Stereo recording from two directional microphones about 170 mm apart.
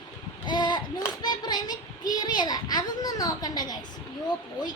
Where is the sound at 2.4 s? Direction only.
25° left (ahead or behind).